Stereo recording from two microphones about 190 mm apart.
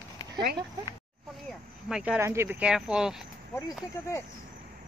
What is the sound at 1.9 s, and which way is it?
Speech, 5° right (ahead or behind).